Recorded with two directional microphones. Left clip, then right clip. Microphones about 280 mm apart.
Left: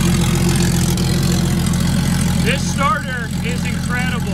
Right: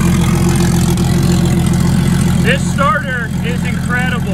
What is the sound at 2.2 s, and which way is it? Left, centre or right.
Vehicle, centre.